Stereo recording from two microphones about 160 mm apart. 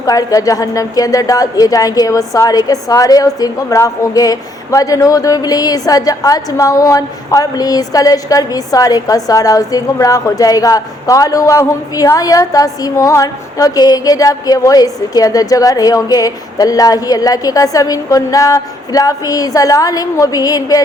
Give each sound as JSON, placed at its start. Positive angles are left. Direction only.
{"t": 0.0, "sound": "a woman's voice", "side_deg": 20}